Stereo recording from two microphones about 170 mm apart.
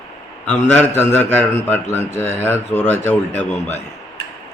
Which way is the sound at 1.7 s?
15° left (ahead or behind).